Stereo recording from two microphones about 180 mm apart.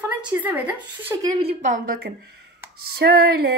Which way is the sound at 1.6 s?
45° right (ahead or behind).